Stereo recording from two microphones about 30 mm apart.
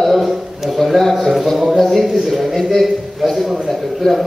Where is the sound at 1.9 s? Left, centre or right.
Centre.